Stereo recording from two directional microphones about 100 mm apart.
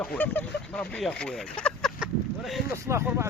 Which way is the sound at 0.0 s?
15° left (ahead or behind).